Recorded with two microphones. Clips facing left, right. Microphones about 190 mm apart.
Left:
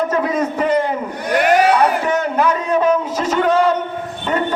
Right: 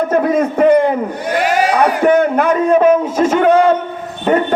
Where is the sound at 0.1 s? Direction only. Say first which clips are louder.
Right 5 dB; 55° right (ahead or behind).